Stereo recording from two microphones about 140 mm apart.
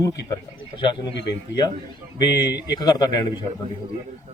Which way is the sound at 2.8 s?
30° left (ahead or behind).